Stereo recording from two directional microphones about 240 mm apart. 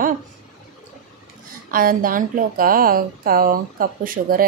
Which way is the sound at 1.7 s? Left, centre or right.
Right.